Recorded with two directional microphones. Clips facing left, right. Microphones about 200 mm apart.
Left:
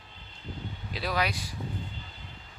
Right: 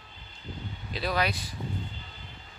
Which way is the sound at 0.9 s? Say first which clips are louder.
Right 2 dB; 10° left (ahead or behind).